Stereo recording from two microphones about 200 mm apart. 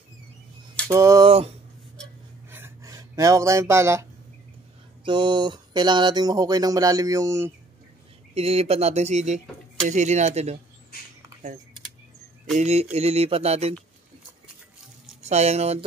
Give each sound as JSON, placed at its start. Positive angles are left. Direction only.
{"t": 0.8, "sound": "a sound", "side_deg": -15}
{"t": 2.5, "sound": "a sound", "side_deg": -15}
{"t": 5.0, "sound": "speech", "side_deg": -20}
{"t": 8.4, "sound": "speech", "side_deg": -30}
{"t": 12.5, "sound": "speech", "side_deg": -35}
{"t": 15.2, "sound": "speech", "side_deg": -35}